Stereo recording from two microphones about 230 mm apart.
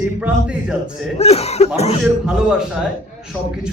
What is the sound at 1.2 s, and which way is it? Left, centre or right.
Speech, left.